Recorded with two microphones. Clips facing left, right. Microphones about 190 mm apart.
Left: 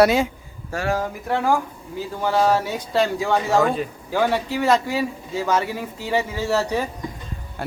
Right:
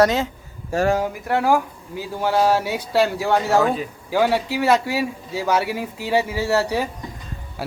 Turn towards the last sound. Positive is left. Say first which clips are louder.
# even
turn(degrees=-5)  # may be behind; listen again after turning